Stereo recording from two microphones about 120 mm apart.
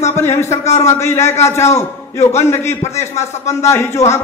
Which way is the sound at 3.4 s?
20° left (ahead or behind).